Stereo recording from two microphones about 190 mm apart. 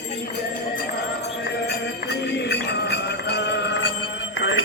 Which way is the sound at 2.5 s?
60° left (ahead or behind).